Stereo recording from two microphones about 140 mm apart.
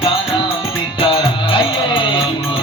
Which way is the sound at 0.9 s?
40° left (ahead or behind).